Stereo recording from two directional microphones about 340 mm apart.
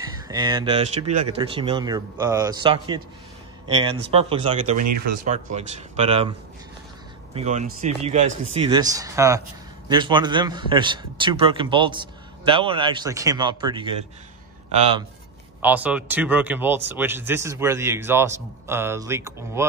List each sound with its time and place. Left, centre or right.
0.0 s a man's voice: centre
4.8 s speech: right
5.2 s speech: right
7.3 s a man's voice: centre
15.6 s a man's voice: centre